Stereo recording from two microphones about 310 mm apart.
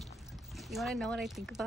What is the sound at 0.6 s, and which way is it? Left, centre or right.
Speech, centre.